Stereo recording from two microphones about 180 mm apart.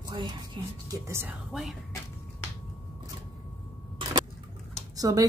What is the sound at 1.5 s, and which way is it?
Speech, centre (ahead or behind).